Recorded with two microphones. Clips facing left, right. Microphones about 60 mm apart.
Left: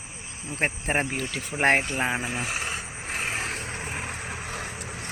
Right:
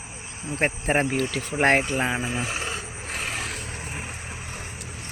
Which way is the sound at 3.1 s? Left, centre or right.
Left.